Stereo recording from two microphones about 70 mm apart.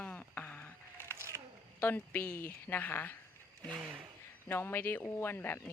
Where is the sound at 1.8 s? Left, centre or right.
Left.